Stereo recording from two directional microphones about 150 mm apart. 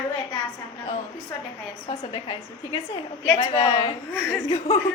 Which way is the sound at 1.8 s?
35° left (ahead or behind).